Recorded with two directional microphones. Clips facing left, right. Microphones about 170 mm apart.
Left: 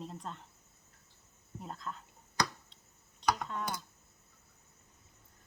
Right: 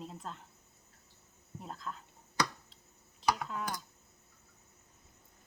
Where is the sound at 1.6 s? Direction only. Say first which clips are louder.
Left 1 dB; centre (ahead or behind).